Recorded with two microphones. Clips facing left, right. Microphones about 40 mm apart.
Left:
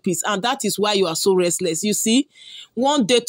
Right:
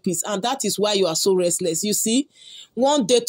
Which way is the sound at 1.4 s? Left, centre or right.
Left.